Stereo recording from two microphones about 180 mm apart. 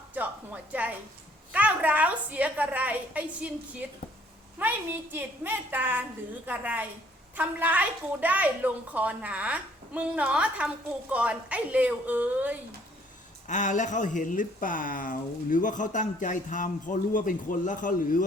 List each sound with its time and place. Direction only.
0.1 s a sound: 10° right (ahead or behind)
1.5 s a woman's voice: 10° right (ahead or behind)
13.5 s speech: 45° left (ahead or behind)